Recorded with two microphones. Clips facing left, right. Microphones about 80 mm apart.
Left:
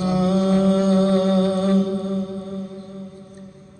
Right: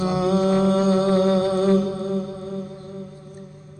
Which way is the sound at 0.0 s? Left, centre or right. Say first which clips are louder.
Even; right.